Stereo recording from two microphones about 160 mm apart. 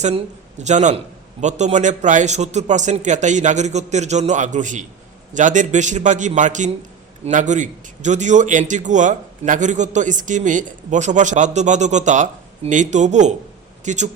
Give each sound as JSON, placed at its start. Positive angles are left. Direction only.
{"t": 0.0, "sound": "a man's voice", "side_deg": -45}